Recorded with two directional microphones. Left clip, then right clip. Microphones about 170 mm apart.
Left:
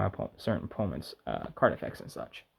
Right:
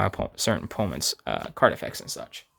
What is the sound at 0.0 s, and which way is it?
Speech, 35° right (ahead or behind).